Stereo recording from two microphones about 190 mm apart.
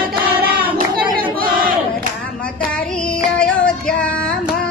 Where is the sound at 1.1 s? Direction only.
50° right (ahead or behind).